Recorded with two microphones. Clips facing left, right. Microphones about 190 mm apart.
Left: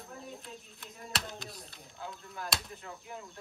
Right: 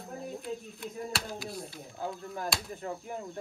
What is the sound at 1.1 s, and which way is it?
Speech, centre (ahead or behind).